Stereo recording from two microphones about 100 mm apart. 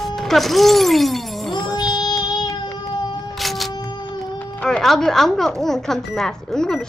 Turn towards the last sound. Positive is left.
turn(degrees=5)  # may be behind; listen again after turning